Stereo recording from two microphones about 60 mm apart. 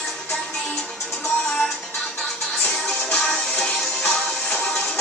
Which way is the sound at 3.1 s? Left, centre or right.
Centre.